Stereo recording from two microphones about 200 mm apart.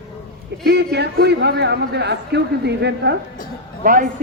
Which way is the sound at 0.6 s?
55° right (ahead or behind).